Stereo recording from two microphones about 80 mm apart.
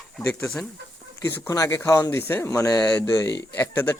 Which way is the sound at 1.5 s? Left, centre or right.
Left.